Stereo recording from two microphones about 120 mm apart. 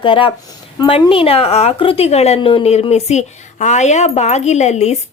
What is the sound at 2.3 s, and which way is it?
A woman's voice, 50° left (ahead or behind).